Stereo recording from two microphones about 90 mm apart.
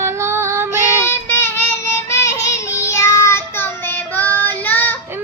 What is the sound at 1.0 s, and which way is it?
Child singing, 25° left (ahead or behind).